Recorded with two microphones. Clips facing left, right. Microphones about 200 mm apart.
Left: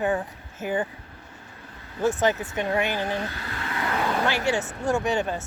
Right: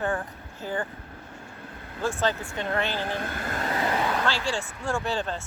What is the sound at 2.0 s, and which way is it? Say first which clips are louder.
Speech: left 4 dB; 20° left (ahead or behind).